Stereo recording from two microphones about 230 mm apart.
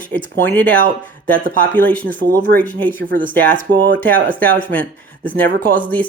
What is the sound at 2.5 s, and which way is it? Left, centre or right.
Speech, right.